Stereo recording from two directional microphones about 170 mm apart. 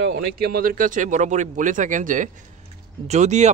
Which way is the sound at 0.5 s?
55° right (ahead or behind).